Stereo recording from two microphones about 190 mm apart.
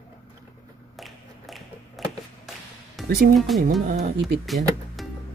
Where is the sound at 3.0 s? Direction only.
50° right (ahead or behind).